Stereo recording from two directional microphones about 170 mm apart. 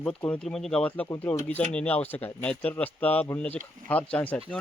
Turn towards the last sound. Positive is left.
turn(degrees=10)  # may be behind; listen again after turning